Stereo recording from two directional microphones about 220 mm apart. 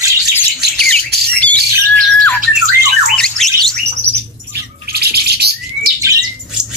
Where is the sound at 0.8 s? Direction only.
5° left (ahead or behind).